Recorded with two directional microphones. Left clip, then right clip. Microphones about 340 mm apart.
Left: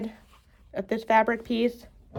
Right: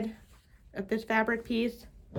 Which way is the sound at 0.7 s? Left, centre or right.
Left.